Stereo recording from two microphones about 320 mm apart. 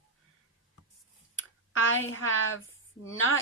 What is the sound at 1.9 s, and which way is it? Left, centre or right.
Speech, left.